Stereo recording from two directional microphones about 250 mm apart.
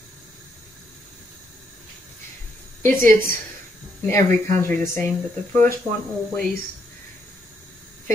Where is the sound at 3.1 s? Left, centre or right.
Right.